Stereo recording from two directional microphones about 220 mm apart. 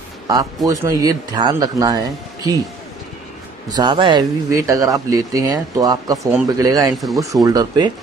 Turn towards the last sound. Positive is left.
turn(degrees=-15)  # may be behind; listen again after turning